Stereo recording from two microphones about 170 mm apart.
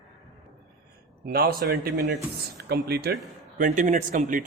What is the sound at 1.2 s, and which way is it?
Speech, 65° right (ahead or behind).